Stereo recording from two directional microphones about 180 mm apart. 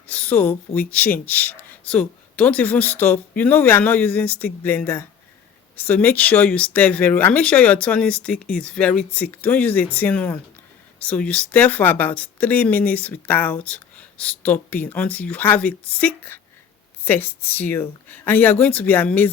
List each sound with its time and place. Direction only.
0.1 s speech: 10° left (ahead or behind)